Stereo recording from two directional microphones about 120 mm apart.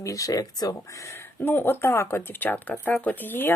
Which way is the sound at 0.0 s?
30° left (ahead or behind).